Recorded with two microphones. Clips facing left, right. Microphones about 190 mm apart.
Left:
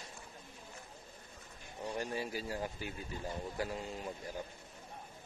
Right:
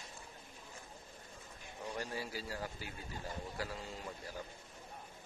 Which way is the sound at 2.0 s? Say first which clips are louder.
Left 4 dB; 20° left (ahead or behind).